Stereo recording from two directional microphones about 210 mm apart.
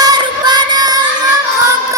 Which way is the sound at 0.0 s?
20° right (ahead or behind).